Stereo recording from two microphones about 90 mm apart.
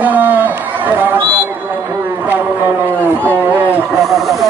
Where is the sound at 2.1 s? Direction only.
20° right (ahead or behind).